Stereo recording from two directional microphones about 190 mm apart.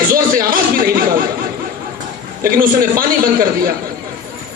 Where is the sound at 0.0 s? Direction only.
50° right (ahead or behind).